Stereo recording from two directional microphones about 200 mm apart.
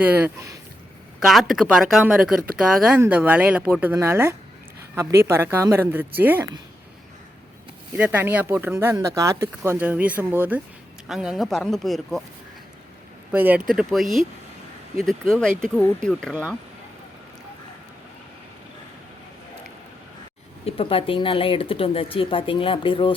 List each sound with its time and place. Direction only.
0.0 s speech: 10° right (ahead or behind)
1.2 s speech: centre (ahead or behind)
7.9 s speech: 10° right (ahead or behind)
13.3 s speech: 10° right (ahead or behind)
16.3 s speech: 10° right (ahead or behind)
20.7 s speech: 25° left (ahead or behind)